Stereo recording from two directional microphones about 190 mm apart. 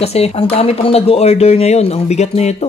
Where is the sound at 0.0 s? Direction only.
30° left (ahead or behind).